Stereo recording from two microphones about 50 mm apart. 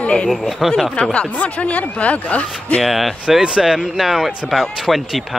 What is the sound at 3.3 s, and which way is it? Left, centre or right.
Speech, centre.